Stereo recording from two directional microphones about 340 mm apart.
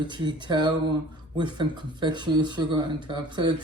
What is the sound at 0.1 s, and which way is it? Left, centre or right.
Speech, centre.